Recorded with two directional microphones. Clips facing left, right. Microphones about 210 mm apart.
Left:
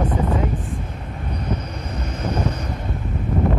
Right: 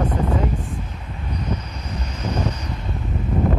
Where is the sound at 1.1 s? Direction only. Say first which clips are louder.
Left 1 dB; 55° left (ahead or behind).